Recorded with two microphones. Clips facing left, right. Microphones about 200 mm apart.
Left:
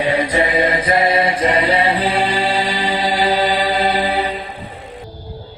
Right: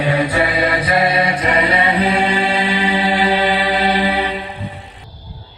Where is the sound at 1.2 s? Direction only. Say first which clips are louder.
Left 1 dB; 30° left (ahead or behind).